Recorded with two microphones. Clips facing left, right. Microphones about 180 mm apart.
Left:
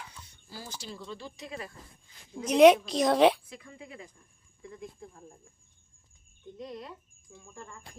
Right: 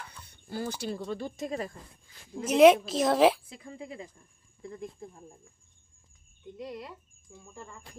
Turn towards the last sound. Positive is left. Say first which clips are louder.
# right 1 dB
turn(degrees=-5)  # may be behind; listen again after turning